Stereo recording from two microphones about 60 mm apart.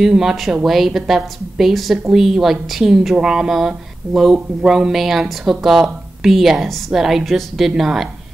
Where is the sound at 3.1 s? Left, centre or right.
Centre.